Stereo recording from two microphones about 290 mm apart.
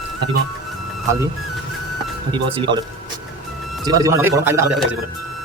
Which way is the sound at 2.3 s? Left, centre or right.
Centre.